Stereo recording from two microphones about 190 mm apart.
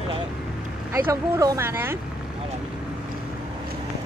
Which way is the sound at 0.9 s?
15° right (ahead or behind).